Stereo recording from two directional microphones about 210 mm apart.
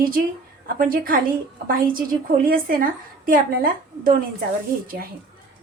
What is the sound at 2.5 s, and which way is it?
A woman's voice, 40° right (ahead or behind).